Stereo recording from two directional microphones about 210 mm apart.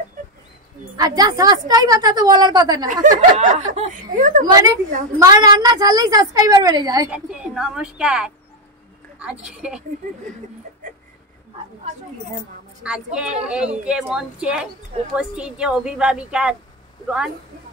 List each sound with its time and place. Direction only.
0.9 s a woman's voice: 20° right (ahead or behind)
2.9 s a woman's voice: 35° right (ahead or behind)
4.5 s a woman's voice: 15° right (ahead or behind)
7.1 s a woman's voice: 5° right (ahead or behind)
12.8 s a woman's voice: 5° right (ahead or behind)